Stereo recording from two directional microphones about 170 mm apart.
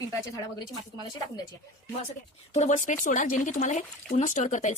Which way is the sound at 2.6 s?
45° left (ahead or behind).